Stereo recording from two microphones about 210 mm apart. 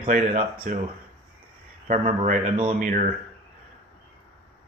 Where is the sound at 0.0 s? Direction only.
40° right (ahead or behind).